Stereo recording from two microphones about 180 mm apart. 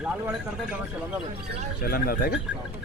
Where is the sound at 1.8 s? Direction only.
55° left (ahead or behind).